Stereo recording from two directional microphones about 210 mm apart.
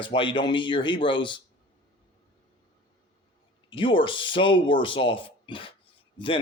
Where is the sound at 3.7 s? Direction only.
25° left (ahead or behind).